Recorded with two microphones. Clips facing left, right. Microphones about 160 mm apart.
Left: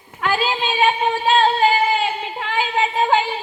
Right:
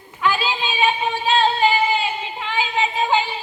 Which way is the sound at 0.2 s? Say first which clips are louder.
Left 1 dB; 50° left (ahead or behind).